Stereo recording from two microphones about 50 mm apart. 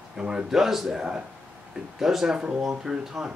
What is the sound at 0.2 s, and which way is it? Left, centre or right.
Speech, centre.